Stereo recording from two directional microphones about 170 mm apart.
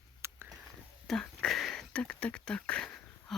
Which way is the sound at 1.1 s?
5° left (ahead or behind).